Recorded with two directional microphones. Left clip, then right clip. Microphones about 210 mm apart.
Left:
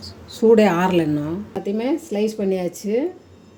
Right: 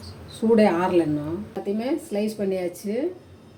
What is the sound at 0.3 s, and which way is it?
Speech, 50° left (ahead or behind).